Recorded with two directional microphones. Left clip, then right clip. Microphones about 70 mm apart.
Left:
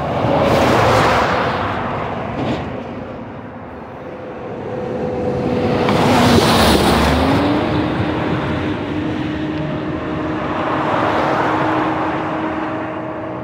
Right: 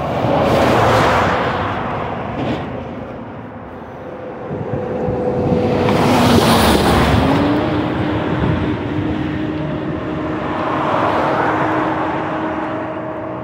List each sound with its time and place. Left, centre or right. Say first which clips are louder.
0.2 s a sound: even; centre
5.6 s vehicle: left 1 dB; centre
6.5 s vehicle: even; centre
10.6 s vehicle: right 1 dB; centre
11.2 s vehicle: even; left